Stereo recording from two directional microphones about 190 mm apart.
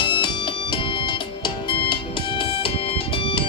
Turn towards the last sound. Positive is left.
turn(degrees=30)  # may be behind; listen again after turning